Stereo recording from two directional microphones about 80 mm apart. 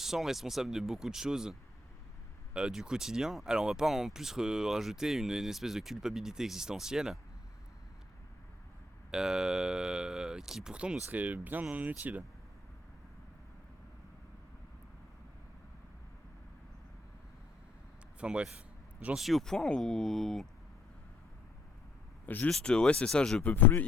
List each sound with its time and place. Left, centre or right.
0.0 s speech: centre
9.1 s speech: centre
18.2 s speech: centre
19.1 s speech: centre
22.4 s speech: centre
23.4 s speech: left